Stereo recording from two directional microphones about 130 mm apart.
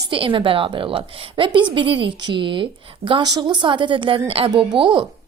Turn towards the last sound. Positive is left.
turn(degrees=-35)  # may be behind; listen again after turning